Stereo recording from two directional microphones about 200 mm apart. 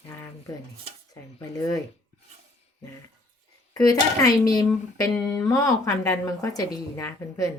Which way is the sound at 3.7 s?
20° left (ahead or behind).